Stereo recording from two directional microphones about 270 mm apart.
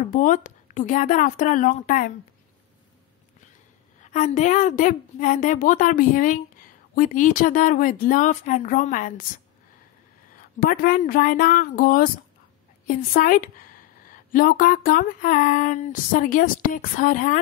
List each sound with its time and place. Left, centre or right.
0.1 s a woman's voice: left
4.0 s a woman's voice: left
10.3 s a woman's voice: left